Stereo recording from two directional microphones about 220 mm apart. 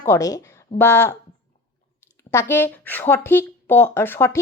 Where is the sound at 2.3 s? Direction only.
10° left (ahead or behind).